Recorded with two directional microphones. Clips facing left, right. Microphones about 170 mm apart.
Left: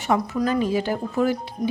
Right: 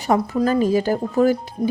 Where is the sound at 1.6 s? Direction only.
30° right (ahead or behind).